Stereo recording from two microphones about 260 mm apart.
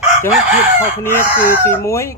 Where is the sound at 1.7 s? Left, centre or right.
Centre.